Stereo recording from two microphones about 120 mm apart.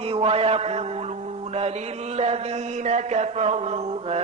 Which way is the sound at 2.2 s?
65° right (ahead or behind).